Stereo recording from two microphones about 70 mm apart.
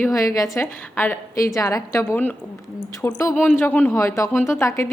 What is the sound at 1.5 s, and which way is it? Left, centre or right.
Speech, left.